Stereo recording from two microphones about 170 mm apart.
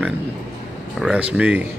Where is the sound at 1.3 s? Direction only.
10° right (ahead or behind).